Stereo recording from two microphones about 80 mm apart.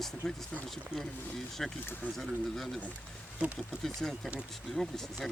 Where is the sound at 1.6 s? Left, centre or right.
Centre.